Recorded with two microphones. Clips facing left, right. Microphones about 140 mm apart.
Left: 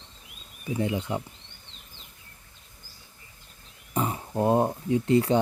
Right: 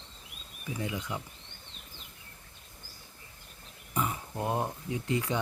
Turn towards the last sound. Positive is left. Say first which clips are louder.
# left 10 dB
turn(degrees=35)  # may be behind; listen again after turning